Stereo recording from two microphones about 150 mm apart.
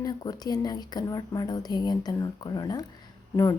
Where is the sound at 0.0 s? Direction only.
25° left (ahead or behind).